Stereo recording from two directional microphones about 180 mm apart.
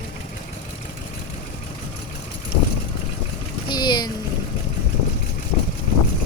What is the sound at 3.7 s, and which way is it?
Speech, 25° left (ahead or behind).